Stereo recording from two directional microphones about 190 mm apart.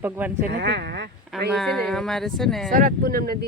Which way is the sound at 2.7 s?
50° right (ahead or behind).